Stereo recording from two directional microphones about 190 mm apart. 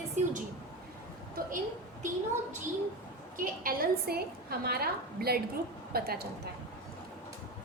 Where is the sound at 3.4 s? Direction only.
50° right (ahead or behind).